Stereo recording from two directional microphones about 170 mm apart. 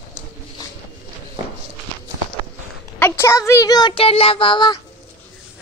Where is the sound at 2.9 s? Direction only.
10° left (ahead or behind); by 4.8 s 25° left (ahead or behind).